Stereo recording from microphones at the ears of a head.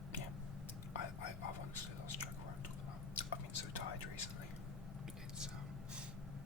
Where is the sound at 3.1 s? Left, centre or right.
Left.